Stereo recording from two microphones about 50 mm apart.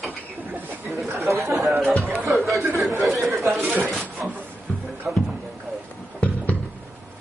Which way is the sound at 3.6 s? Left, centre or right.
Right.